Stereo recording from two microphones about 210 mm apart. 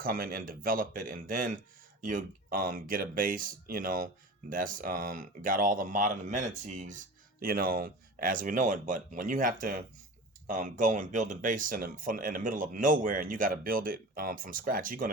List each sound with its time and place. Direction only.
0.0 s speech: 45° right (ahead or behind)